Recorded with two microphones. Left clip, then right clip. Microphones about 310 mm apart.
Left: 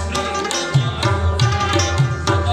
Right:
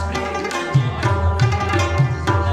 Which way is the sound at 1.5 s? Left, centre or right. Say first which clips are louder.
Left 2 dB; centre.